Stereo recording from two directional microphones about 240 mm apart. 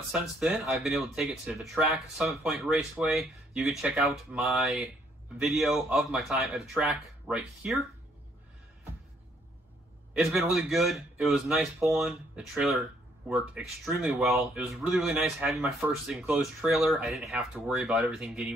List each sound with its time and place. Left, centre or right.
0.1 s speech: centre
10.1 s speech: centre